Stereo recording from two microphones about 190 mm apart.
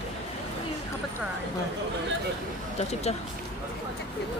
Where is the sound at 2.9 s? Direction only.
35° left (ahead or behind).